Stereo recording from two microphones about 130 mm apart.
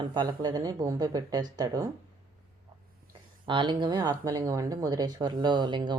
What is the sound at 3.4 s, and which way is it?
A woman's voice, 35° right (ahead or behind).